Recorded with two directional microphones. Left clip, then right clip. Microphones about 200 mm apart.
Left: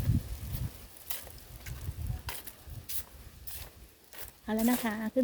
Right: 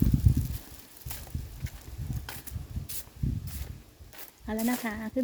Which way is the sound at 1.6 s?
5° left (ahead or behind).